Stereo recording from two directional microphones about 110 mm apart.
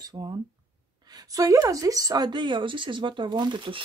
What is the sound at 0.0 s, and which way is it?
A woman's voice, 40° right (ahead or behind).